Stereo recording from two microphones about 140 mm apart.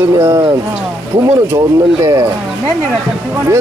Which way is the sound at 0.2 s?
25° right (ahead or behind).